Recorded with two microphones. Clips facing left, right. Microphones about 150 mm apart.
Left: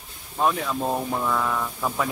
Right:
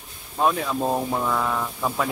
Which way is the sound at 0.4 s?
10° right (ahead or behind).